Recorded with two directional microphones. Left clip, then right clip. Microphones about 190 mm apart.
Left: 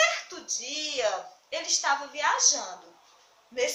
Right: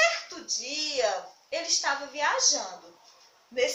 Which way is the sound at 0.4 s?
10° left (ahead or behind).